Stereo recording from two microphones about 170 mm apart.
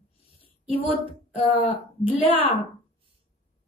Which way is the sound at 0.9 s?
35° left (ahead or behind).